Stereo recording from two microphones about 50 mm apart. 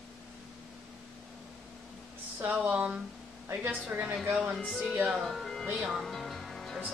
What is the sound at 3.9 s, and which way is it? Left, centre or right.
Speech, right.